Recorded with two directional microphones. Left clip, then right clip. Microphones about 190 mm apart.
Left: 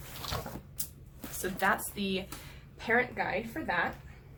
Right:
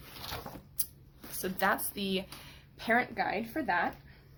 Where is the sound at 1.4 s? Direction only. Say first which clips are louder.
Left 1 dB; 55° right (ahead or behind).